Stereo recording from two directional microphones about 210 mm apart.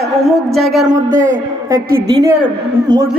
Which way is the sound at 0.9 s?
40° right (ahead or behind).